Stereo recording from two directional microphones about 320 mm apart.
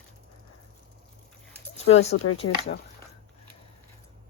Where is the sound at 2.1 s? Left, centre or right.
Left.